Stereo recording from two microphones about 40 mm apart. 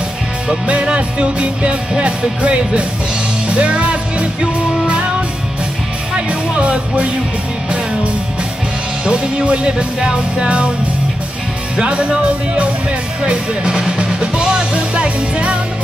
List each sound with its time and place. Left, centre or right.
0.7 s music: right
6.1 s music: right
9.0 s music: right
11.7 s music: right